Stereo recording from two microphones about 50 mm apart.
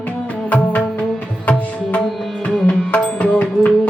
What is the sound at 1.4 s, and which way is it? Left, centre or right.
Music, left.